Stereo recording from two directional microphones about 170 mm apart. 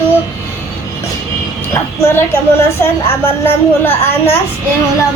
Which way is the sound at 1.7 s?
15° left (ahead or behind).